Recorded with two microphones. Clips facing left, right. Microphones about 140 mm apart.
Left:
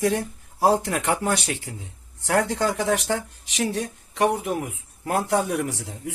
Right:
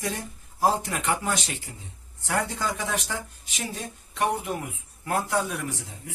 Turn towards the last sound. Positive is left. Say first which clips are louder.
# left 4 dB
turn(degrees=70)  # may be behind; listen again after turning